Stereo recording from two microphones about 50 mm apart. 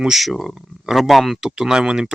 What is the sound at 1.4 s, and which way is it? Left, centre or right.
Speech, centre.